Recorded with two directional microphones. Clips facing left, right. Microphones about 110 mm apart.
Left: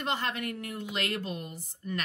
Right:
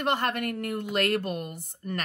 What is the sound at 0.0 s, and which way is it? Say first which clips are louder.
A woman's voice: right 5 dB; 55° right (ahead or behind).